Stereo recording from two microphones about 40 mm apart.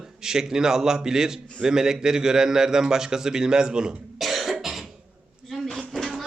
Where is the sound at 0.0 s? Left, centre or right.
Centre.